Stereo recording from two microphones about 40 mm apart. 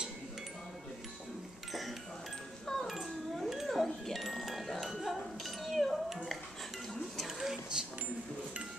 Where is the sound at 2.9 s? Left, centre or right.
Centre.